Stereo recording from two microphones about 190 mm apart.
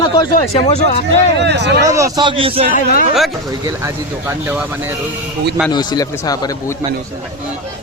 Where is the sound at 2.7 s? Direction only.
45° left (ahead or behind).